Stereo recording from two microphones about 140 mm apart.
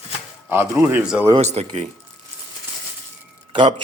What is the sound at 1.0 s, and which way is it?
Speech, 5° right (ahead or behind).